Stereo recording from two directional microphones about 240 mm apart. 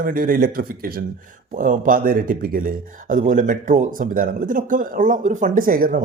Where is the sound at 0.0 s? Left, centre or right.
Right.